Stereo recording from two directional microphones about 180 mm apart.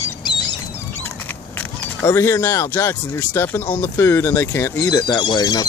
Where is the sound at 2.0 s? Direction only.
15° left (ahead or behind).